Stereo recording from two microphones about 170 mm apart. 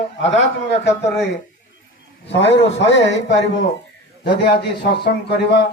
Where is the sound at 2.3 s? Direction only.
90° left.